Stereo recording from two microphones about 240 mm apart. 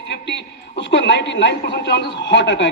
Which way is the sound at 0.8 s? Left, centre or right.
Left.